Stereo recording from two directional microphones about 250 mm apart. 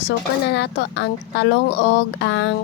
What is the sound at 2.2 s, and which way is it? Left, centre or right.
Music, left.